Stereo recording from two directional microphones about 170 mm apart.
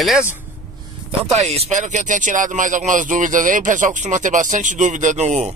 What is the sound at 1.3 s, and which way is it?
Speech, 40° right (ahead or behind).